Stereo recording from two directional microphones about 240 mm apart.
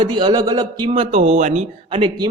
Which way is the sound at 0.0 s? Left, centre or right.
Centre.